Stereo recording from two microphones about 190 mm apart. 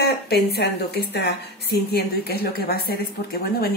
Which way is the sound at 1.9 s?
55° left (ahead or behind).